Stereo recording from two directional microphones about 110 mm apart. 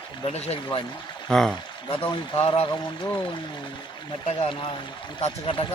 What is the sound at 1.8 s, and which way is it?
Speech, 50° left (ahead or behind).